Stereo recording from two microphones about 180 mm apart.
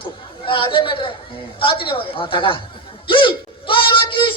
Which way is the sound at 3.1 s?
30° left (ahead or behind).